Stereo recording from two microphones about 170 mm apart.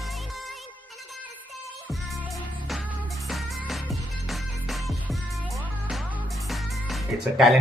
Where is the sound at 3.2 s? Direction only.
Centre (ahead or behind).